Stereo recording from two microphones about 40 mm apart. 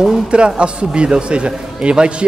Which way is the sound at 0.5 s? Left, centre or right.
Right.